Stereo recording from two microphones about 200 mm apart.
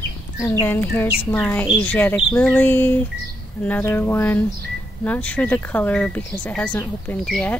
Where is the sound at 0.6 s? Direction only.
10° left (ahead or behind).